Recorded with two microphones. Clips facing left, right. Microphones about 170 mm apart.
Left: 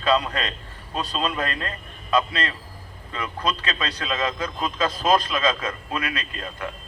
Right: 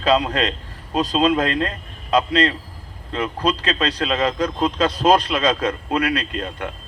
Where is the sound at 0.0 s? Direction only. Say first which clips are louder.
Right 4 dB; 75° right (ahead or behind).